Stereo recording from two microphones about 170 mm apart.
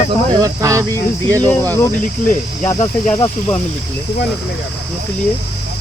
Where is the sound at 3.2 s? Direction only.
10° left (ahead or behind).